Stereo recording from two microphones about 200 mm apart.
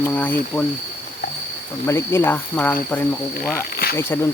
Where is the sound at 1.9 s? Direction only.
15° left (ahead or behind).